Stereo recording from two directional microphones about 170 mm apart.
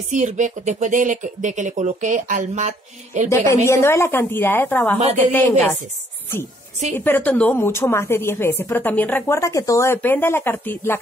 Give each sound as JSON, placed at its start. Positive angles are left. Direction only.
{"t": 0.1, "sound": "speech", "side_deg": -45}
{"t": 3.3, "sound": "a woman's voice", "side_deg": 15}
{"t": 7.1, "sound": "a woman's voice", "side_deg": 10}